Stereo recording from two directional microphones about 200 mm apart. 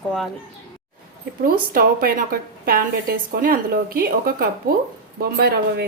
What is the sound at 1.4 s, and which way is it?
A woman's voice, 45° right (ahead or behind).